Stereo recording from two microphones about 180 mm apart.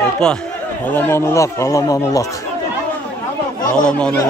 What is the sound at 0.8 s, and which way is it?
A man's voice, 10° left (ahead or behind).